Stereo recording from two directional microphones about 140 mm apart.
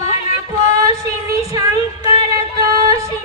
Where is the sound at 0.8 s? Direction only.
20° right (ahead or behind).